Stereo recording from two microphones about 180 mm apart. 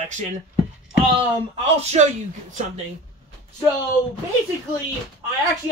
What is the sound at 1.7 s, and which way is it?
Speech, 40° right (ahead or behind).